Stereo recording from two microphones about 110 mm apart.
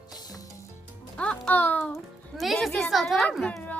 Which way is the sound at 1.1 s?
10° left (ahead or behind).